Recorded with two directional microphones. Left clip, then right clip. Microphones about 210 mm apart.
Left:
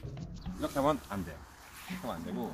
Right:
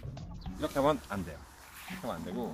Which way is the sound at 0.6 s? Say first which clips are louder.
Right 1 dB; 15° right (ahead or behind).